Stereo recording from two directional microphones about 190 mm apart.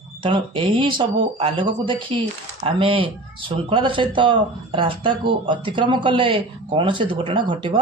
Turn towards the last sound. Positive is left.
turn(degrees=-25)  # may be behind; listen again after turning